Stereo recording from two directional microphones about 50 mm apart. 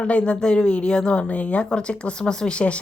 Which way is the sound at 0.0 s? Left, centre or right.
Left.